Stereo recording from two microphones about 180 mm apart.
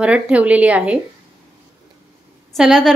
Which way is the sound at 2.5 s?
Centre (ahead or behind).